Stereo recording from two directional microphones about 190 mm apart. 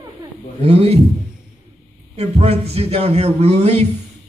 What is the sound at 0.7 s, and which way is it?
Speech, 35° right (ahead or behind).